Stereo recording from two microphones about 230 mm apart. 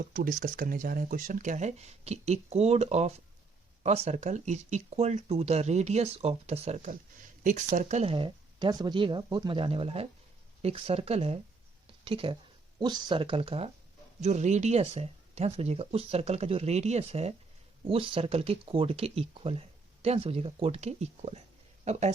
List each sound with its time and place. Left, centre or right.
0.0 s speech: right